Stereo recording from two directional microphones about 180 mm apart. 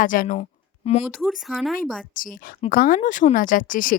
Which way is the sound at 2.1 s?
50° left (ahead or behind).